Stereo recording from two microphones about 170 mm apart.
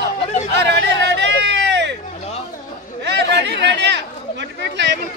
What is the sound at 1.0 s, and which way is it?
Hubbub, 90° right.